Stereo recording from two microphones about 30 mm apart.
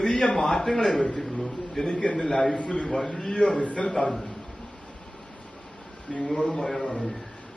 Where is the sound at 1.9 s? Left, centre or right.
Left.